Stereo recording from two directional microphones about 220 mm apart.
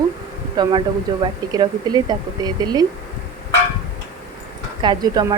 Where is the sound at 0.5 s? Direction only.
20° right (ahead or behind).